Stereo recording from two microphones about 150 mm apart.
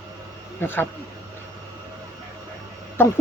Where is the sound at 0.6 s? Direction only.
15° left (ahead or behind).